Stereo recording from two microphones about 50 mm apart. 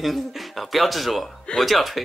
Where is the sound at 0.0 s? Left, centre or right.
Centre.